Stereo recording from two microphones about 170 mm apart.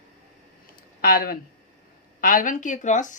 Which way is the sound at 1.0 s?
60° left (ahead or behind).